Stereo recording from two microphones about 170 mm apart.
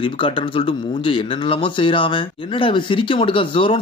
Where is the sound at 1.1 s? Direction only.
30° left (ahead or behind).